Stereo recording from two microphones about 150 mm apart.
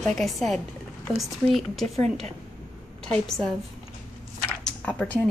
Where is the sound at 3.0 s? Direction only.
5° left (ahead or behind).